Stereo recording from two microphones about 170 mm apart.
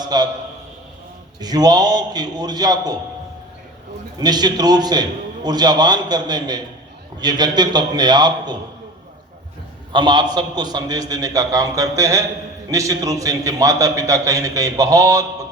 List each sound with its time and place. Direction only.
0.0 s a man's voice: 25° right (ahead or behind)
1.4 s a man's voice: 25° right (ahead or behind)
4.2 s a man's voice: 25° right (ahead or behind)
9.9 s a man's voice: 25° right (ahead or behind)